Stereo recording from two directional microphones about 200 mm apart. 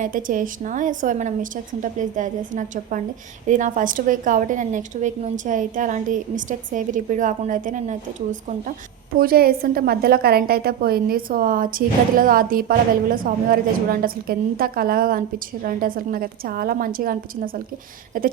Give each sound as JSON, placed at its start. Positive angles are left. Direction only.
{"t": 0.0, "sound": "a woman's voice", "side_deg": -40}
{"t": 9.1, "sound": "a woman's voice", "side_deg": -50}